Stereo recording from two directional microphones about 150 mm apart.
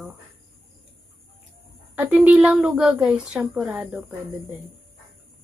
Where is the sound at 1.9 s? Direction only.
10° right (ahead or behind).